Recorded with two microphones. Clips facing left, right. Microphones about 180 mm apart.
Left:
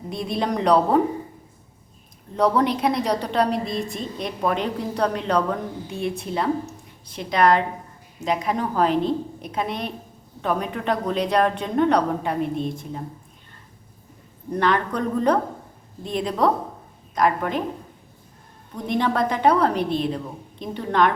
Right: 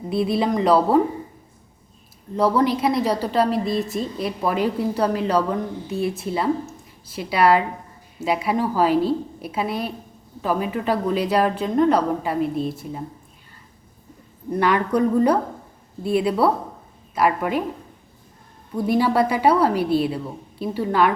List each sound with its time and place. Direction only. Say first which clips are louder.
0.1 s a woman's voice: right 5 dB; 5° right (ahead or behind)
2.3 s a woman's voice: right 1 dB; centre (ahead or behind)
14.6 s a woman's voice: right 3 dB; 10° right (ahead or behind)
18.8 s a woman's voice: right 4 dB; 5° right (ahead or behind)